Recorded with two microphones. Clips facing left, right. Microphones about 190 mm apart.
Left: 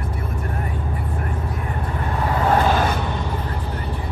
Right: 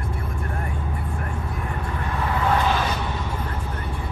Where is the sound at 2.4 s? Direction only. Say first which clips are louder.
Left 4 dB; 45° left (ahead or behind).